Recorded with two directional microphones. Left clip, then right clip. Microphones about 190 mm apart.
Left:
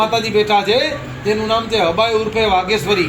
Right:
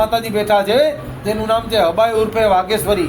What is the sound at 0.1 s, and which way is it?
Speech, 25° right (ahead or behind).